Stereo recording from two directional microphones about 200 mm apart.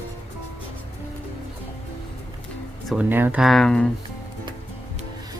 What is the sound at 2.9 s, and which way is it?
Speech, 10° right (ahead or behind).